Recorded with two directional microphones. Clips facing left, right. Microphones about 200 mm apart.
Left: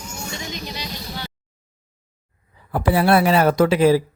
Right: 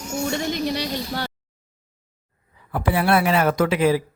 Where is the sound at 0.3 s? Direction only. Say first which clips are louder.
Right 9 dB; 55° right (ahead or behind).